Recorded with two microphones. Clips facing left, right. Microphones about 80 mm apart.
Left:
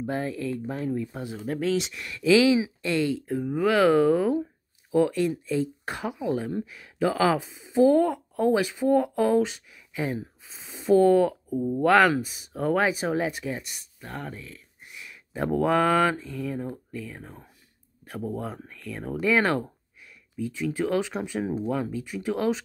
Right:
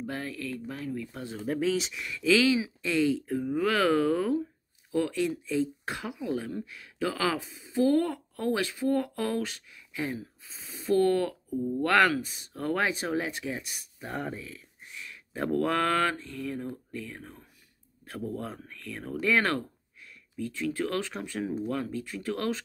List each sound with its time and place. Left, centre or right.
0.0 s speech: left
1.4 s speech: centre
10.4 s a sound: centre
11.8 s speech: centre
14.9 s a sound: centre
17.2 s speech: centre